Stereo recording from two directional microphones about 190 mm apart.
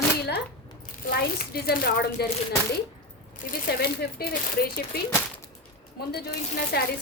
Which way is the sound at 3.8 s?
55° left (ahead or behind).